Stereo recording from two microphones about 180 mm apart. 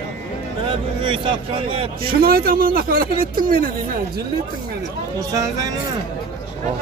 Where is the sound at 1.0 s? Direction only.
30° right (ahead or behind).